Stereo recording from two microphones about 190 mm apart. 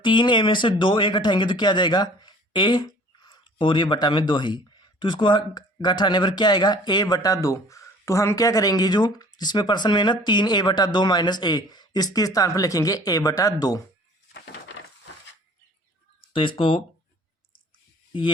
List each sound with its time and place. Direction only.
0.0 s speech: 25° left (ahead or behind)
14.3 s a sound: 70° left (ahead or behind)
16.3 s speech: 25° left (ahead or behind)